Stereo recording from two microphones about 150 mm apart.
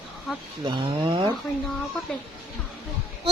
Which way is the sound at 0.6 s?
35° right (ahead or behind).